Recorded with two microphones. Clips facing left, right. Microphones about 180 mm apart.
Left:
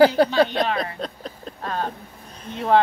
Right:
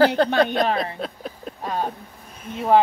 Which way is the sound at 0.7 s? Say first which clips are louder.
Right 1 dB; 5° right (ahead or behind).